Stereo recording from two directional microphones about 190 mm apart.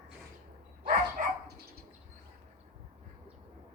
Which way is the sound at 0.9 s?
45° right (ahead or behind).